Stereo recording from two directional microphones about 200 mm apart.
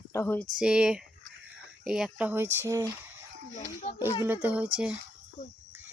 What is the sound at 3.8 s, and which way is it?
Speech, 30° left (ahead or behind).